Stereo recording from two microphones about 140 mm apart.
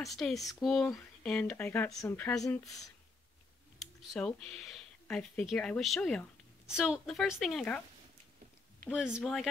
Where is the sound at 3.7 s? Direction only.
Centre (ahead or behind).